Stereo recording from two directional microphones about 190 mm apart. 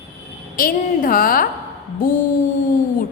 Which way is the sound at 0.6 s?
50° left (ahead or behind).